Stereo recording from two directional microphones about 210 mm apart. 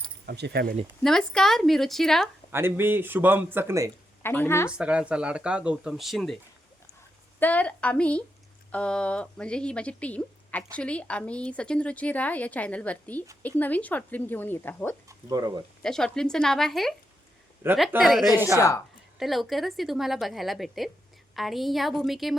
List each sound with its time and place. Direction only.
0.3 s speech: 50° right (ahead or behind)
1.0 s speech: centre (ahead or behind)
2.5 s speech: 10° right (ahead or behind)
4.2 s a woman's voice: 10° left (ahead or behind)
4.7 s speech: 5° right (ahead or behind)
7.3 s a woman's voice: 10° left (ahead or behind)
15.3 s speech: 15° right (ahead or behind)
15.8 s speech: 5° left (ahead or behind)
18.5 s a woman's voice: 15° left (ahead or behind)
19.2 s speech: centre (ahead or behind)